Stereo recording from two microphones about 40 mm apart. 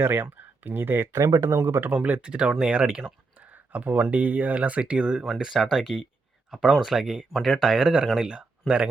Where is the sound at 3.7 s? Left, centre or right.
Right.